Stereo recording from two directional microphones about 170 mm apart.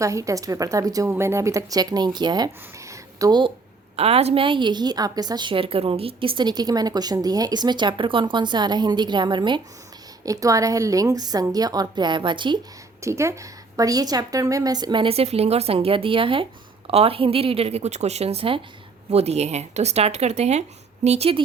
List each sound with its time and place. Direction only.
0.0 s a woman's voice: 20° right (ahead or behind)
2.9 s a sound: 20° right (ahead or behind)
3.9 s a woman's voice: 35° right (ahead or behind)
13.0 s a woman's voice: 15° right (ahead or behind); by 21.4 s 35° right (ahead or behind)